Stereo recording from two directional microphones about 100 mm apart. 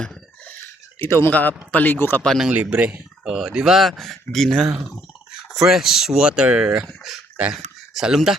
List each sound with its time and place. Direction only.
1.0 s speech: 20° left (ahead or behind)
2.5 s speech: 10° right (ahead or behind)